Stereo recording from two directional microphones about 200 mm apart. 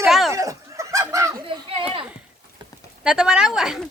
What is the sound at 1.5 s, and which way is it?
Speech, 25° right (ahead or behind).